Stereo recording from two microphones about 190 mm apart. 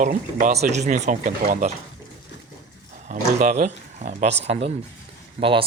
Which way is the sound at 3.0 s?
40° right (ahead or behind).